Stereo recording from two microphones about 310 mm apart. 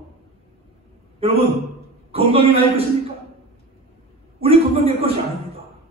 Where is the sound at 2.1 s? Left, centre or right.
Centre.